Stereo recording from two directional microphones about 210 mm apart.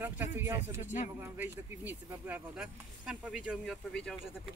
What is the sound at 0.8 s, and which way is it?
Speech, 35° left (ahead or behind).